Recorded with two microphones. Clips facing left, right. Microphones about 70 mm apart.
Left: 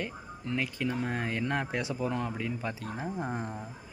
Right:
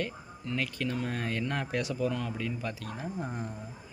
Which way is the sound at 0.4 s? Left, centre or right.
Left.